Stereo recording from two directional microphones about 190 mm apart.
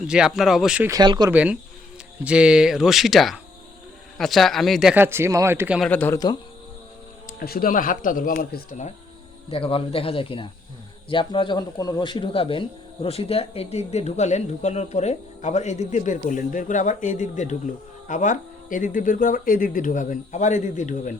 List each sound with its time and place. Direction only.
0.1 s speech: centre (ahead or behind)
0.9 s speech: 20° right (ahead or behind)
1.3 s speech: 5° right (ahead or behind)
5.9 s a man's voice: 10° left (ahead or behind)
7.3 s speech: 50° left (ahead or behind)
9.5 s speech: 30° left (ahead or behind)